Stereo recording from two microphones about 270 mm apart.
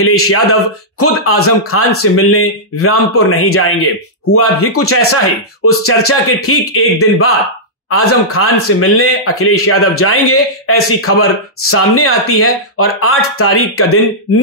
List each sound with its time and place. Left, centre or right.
0.0 s a man's voice: left